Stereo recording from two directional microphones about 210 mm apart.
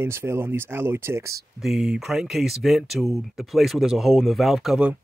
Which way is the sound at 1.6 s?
Centre (ahead or behind).